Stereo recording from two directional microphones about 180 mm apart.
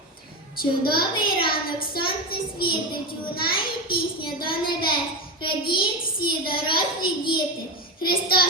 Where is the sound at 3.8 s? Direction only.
25° left (ahead or behind).